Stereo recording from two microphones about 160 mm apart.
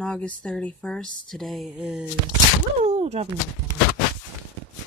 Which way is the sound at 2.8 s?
40° right (ahead or behind).